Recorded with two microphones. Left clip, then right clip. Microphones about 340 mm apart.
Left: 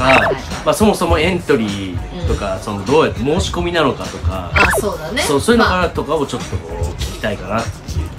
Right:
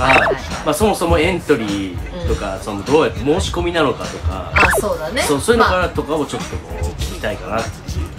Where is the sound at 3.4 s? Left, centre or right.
Left.